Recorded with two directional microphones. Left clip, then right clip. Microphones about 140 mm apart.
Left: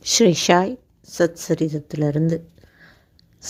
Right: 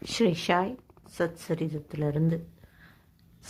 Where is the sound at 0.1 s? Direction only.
50° left (ahead or behind).